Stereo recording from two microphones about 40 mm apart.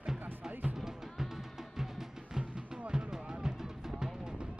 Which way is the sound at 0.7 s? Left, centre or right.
Centre.